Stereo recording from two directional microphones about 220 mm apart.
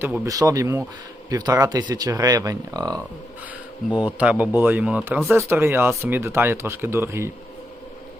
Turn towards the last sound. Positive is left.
turn(degrees=-10)  # may be behind; listen again after turning